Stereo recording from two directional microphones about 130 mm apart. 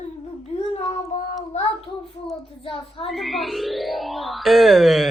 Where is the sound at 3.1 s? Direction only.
Centre (ahead or behind).